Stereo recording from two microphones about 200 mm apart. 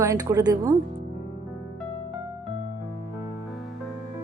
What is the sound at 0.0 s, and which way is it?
Speech, 15° right (ahead or behind).